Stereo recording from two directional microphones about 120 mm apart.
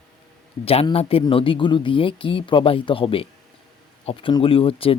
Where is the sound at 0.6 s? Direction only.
55° left (ahead or behind).